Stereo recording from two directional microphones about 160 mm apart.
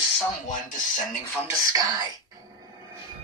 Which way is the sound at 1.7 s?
25° right (ahead or behind).